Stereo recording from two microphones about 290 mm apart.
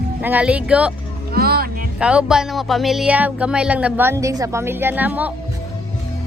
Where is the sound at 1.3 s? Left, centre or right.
Right.